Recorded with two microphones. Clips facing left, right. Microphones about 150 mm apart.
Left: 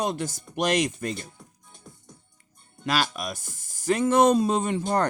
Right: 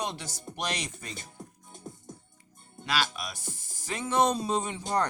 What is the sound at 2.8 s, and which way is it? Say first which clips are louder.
Speech: left 5 dB; 45° left (ahead or behind).